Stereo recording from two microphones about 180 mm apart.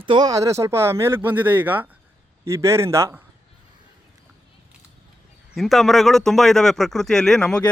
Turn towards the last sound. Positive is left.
turn(degrees=5)  # may be behind; listen again after turning